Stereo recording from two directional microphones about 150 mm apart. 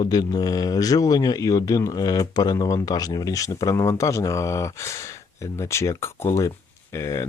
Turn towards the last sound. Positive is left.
turn(degrees=20)  # may be behind; listen again after turning